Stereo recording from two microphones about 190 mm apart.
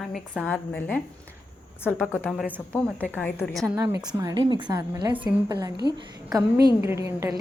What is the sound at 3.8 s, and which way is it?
A woman's voice, 20° right (ahead or behind).